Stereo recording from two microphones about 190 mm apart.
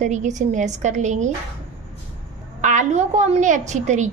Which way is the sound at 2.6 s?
40° right (ahead or behind).